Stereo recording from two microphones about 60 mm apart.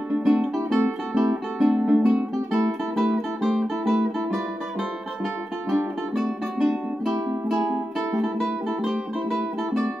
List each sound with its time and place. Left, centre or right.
0.2 s music: centre
2.3 s music: centre
6.1 s music: centre
8.4 s guitar: centre